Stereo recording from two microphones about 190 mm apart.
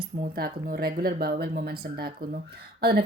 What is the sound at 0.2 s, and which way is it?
Speech, 50° right (ahead or behind).